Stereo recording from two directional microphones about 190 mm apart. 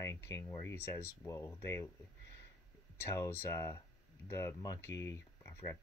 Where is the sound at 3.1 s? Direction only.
15° left (ahead or behind).